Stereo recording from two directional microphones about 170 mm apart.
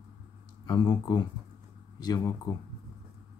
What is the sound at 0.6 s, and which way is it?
Speech, 25° left (ahead or behind).